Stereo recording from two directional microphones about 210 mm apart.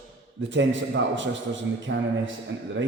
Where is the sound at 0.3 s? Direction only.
60° right (ahead or behind).